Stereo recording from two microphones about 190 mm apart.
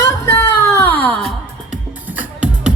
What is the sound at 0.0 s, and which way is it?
Music, 15° left (ahead or behind).